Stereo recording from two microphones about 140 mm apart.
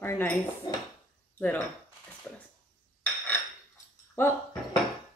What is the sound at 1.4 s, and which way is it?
Speech, 15° left (ahead or behind).